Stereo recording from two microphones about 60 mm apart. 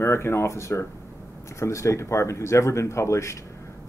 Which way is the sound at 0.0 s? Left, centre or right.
Left.